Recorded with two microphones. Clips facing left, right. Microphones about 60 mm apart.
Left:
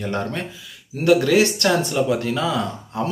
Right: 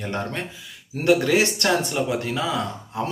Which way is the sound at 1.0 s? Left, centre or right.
Right.